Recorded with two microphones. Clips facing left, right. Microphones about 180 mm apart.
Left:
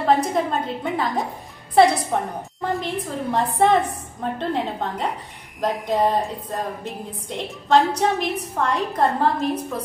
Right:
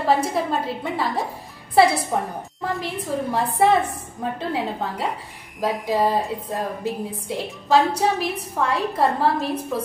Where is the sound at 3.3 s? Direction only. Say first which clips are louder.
Left 1 dB; 5° right (ahead or behind).